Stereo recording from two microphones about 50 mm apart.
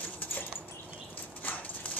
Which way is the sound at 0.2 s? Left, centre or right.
Left.